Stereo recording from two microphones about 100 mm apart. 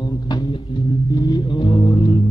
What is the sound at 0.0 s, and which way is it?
Music, 45° left (ahead or behind).